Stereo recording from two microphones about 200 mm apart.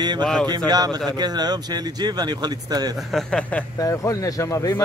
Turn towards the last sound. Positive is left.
turn(degrees=15)  # may be behind; listen again after turning